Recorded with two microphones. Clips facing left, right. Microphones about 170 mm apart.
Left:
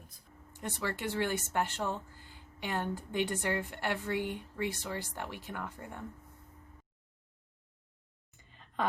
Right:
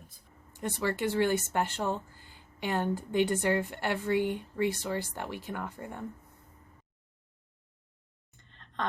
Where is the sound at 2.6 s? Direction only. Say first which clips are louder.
Right 5 dB; 55° right (ahead or behind).